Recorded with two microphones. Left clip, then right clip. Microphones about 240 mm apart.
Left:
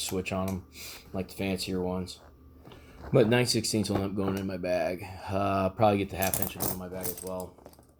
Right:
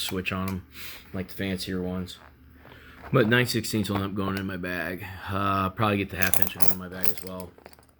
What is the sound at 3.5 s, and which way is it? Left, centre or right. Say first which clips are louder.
Speech: even; centre.